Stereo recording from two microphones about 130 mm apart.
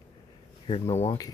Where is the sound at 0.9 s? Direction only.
25° left (ahead or behind).